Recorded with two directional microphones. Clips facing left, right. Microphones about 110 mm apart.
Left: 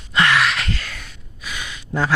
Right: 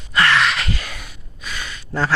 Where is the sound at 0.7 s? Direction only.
15° right (ahead or behind).